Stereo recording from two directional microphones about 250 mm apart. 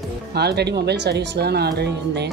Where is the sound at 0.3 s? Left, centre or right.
Right.